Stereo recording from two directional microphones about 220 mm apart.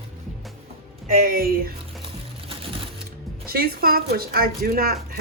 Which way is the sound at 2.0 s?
25° right (ahead or behind).